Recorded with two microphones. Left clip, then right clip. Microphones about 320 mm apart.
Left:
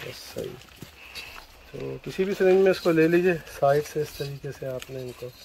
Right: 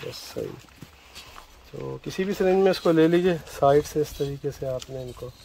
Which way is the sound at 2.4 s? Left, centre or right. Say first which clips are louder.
Left 1 dB; right.